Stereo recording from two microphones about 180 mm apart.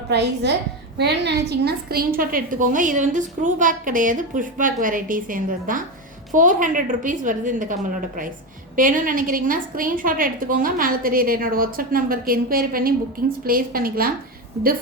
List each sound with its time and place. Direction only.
0.1 s a woman's voice: 70° right (ahead or behind); by 14.1 s 55° right (ahead or behind)